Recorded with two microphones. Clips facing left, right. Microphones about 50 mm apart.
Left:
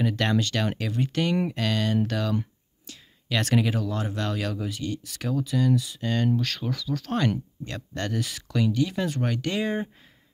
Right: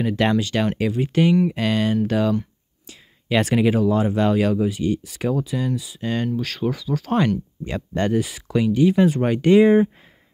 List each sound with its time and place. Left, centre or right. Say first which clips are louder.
0.0 s speech: right 5 dB; centre